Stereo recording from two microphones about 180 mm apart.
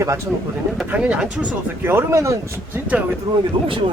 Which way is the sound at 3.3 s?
25° right (ahead or behind).